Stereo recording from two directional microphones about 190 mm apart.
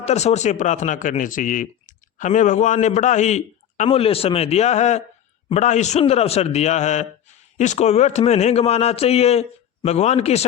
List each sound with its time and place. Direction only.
0.0 s speech: 35° left (ahead or behind)